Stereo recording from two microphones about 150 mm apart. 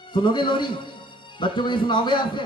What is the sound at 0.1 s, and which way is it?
Mantra, 30° left (ahead or behind).